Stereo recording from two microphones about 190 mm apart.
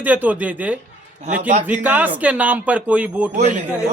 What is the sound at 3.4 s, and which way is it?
Speech, 40° right (ahead or behind).